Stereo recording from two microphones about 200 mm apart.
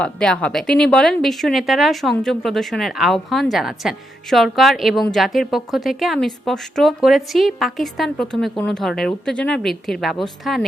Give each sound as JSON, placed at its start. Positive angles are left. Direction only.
{"t": 0.0, "sound": "speech", "side_deg": 5}